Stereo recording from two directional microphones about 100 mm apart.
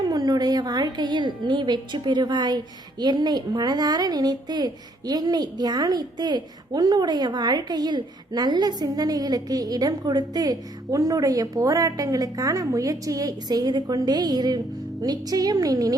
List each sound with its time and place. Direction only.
0.1 s a woman's voice: 40° right (ahead or behind)